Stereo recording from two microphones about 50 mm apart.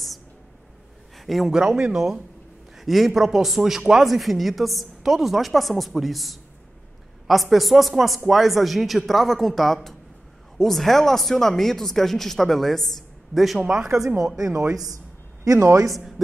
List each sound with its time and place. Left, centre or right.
1.1 s a sound: centre
1.5 s a man's voice: centre
2.8 s a man's voice: centre
13.6 s a man's voice: centre
15.4 s speech: right
15.9 s speech: centre